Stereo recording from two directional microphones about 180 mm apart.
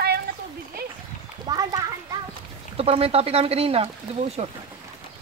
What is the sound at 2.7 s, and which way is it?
Speech, 35° right (ahead or behind).